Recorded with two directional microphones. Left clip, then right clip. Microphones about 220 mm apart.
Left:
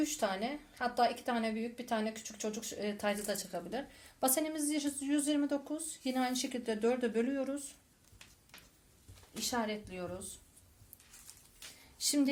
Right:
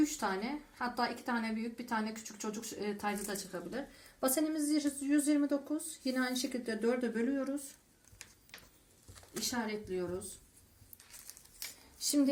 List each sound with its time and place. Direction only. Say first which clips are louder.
0.0 s speech: even; 35° left (ahead or behind)
9.5 s speech: left 2 dB; 35° left (ahead or behind)
11.9 s speech: right 1 dB; 35° left (ahead or behind)